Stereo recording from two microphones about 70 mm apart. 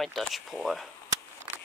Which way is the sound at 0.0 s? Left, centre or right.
Centre.